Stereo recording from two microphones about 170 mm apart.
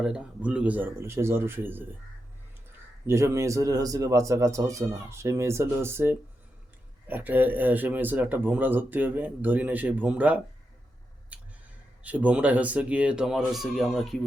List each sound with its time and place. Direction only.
0.0 s speech: 5° right (ahead or behind)
3.1 s speech: 15° right (ahead or behind)
11.3 s a sound: 10° right (ahead or behind)
12.0 s speech: 10° right (ahead or behind)